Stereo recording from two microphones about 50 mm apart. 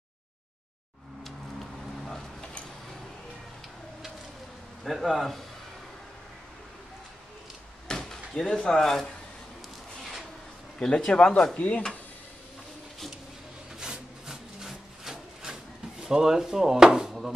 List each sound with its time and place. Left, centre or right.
4.8 s a man's voice: centre
7.9 s a sound: centre
8.7 s speech: centre
10.8 s speech: centre
13.7 s wood: centre
16.0 s speech: centre